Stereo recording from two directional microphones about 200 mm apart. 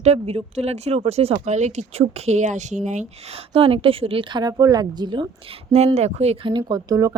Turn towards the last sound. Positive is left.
turn(degrees=-20)  # may be behind; listen again after turning